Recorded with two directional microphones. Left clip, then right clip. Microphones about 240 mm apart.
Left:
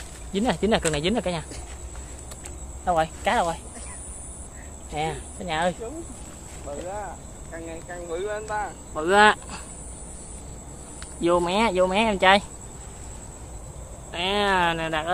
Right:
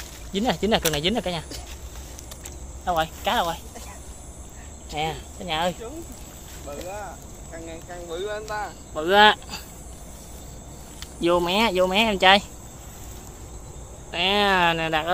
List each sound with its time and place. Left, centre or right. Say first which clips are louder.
0.3 s speech: even; centre
2.8 s speech: left 1 dB; centre
4.9 s speech: right 1 dB; centre
7.5 s speech: left 1 dB; centre
11.1 s speech: right 1 dB; centre
14.1 s speech: right 2 dB; right